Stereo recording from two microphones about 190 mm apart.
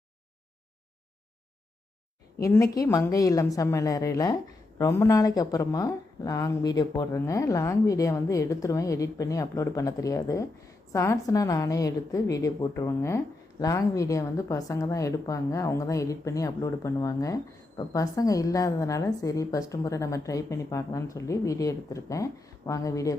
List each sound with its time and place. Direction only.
2.4 s a woman's voice: 15° left (ahead or behind)